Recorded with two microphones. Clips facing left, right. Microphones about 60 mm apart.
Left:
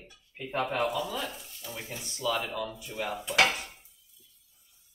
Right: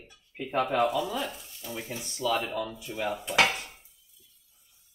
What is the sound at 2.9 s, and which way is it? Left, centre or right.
Dishes, right.